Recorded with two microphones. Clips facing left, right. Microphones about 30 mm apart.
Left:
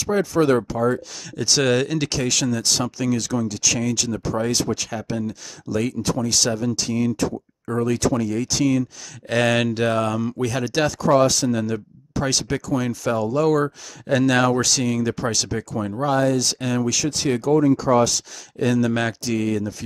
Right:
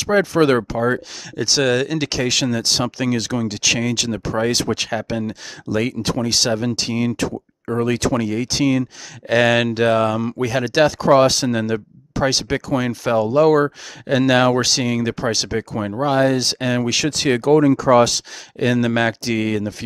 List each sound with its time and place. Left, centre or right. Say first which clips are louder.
0.0 s speech: right 4 dB; right
1.3 s speech: right 2 dB; centre
1.6 s speech: right 2 dB; centre
2.0 s speech: right 3 dB; centre; by 4.6 s right
4.6 s speech: right 3 dB; right
4.8 s speech: right 4 dB; right
8.3 s speech: right 2 dB; right
9.3 s speech: right 4 dB; centre; by 17.0 s right
17.0 s speech: right 4 dB; right
18.6 s speech: right 3 dB; right